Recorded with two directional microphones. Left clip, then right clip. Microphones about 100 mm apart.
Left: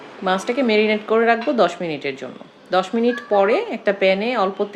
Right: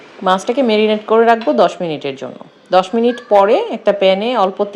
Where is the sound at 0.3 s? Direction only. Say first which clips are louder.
Right 6 dB; 40° right (ahead or behind).